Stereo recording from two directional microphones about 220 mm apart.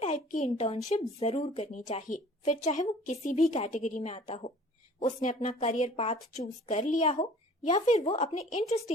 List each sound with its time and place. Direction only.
0.0 s a woman's voice: 30° left (ahead or behind)